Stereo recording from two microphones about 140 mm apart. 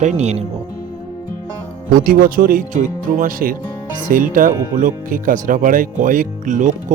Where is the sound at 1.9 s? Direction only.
85° right.